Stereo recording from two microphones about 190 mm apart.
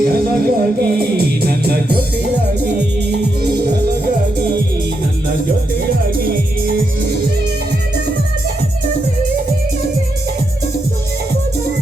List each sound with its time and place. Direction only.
0.0 s music: 55° right (ahead or behind)
6.1 s music: 50° right (ahead or behind)